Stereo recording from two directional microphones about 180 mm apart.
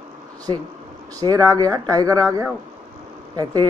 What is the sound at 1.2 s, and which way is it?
Speech, 20° right (ahead or behind).